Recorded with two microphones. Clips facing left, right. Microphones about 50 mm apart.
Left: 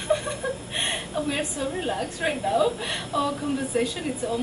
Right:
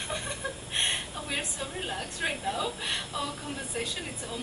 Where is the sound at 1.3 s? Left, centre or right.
Centre.